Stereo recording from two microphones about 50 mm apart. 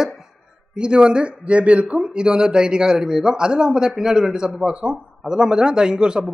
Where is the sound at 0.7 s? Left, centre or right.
Centre.